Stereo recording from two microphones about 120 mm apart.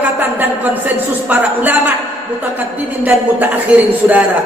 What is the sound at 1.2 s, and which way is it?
Speech, 15° right (ahead or behind).